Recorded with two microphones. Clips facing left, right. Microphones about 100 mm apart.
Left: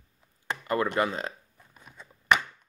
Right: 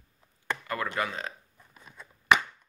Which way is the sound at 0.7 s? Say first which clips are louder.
Left 7 dB; 30° left (ahead or behind).